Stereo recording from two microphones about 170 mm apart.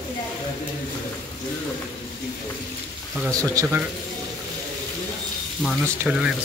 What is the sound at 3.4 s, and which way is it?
Speech, 15° right (ahead or behind).